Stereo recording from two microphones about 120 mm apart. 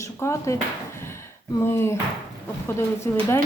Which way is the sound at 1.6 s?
20° left (ahead or behind).